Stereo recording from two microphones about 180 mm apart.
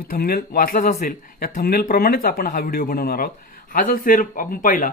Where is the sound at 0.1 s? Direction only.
55° left (ahead or behind).